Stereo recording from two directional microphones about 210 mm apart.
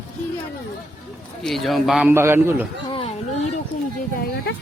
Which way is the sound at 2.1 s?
10° right (ahead or behind).